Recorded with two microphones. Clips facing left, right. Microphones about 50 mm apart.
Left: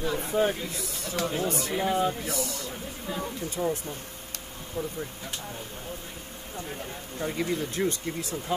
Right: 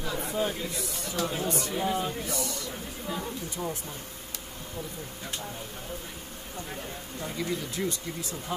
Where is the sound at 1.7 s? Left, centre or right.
Left.